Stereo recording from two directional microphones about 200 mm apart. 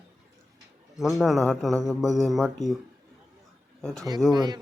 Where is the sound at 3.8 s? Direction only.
5° left (ahead or behind).